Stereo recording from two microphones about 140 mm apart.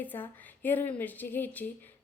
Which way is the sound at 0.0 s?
15° left (ahead or behind).